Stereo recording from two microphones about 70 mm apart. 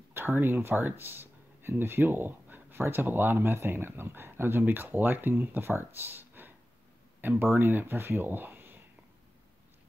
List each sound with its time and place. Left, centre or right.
0.1 s speech: right